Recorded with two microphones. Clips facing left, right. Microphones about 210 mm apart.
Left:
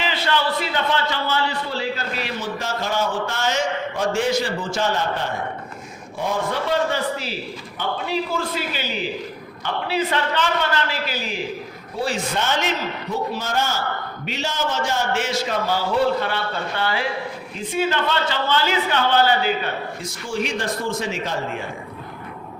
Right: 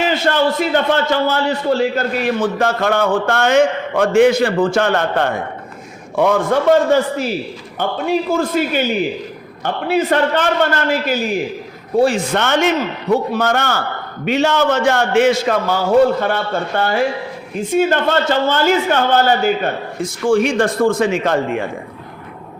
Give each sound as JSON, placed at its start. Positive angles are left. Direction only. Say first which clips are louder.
{"t": 0.0, "sound": "a man's voice", "louder": "right 7 dB", "side_deg": -45}
{"t": 12.0, "sound": "a man's voice", "louder": "right 7 dB", "side_deg": -60}